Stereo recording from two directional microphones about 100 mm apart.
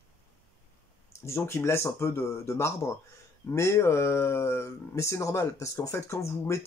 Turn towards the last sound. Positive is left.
turn(degrees=30)  # may be behind; listen again after turning